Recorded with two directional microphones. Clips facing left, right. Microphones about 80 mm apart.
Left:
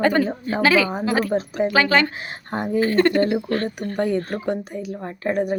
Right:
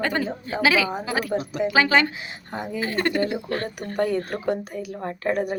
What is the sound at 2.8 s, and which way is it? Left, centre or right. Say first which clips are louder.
Speech: left 6 dB; centre.